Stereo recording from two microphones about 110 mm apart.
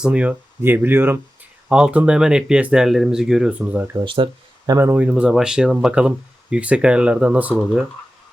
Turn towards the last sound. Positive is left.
turn(degrees=-15)  # may be behind; listen again after turning